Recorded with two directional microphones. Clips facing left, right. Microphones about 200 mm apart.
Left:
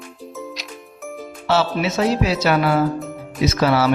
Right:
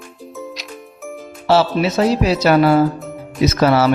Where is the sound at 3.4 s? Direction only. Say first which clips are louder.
Right 3 dB; 45° right (ahead or behind).